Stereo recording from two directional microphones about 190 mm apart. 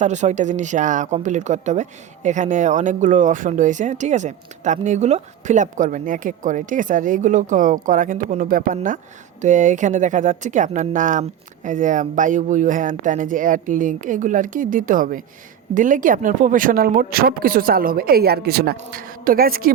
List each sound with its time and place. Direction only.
0.0 s speech: 40° right (ahead or behind)